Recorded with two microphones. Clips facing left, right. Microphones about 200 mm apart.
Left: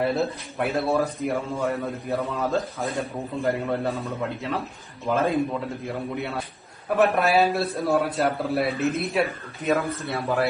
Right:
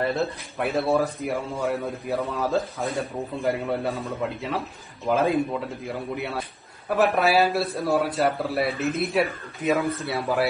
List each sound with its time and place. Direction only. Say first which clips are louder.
0.0 s speech: left 1 dB; centre (ahead or behind)